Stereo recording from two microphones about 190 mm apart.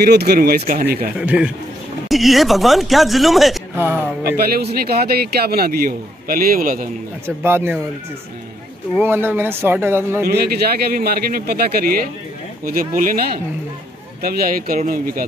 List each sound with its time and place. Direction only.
0.0 s a man's voice: 55° right (ahead or behind)
1.2 s speech: 5° right (ahead or behind)
3.7 s speech: 10° right (ahead or behind)
4.7 s a man's voice: 55° right (ahead or behind)
7.2 s speech: 10° right (ahead or behind)
8.9 s speech: 10° right (ahead or behind)
10.2 s a man's voice: 55° right (ahead or behind)